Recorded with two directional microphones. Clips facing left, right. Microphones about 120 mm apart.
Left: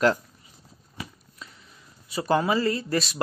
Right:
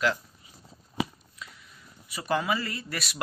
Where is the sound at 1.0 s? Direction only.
90° right.